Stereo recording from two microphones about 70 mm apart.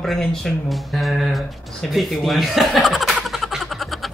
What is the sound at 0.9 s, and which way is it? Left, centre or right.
Speech, centre.